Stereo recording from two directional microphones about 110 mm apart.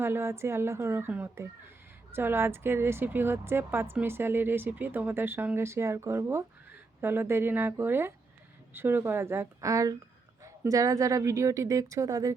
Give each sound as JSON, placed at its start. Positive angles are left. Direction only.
{"t": 0.0, "sound": "a woman's voice", "side_deg": -25}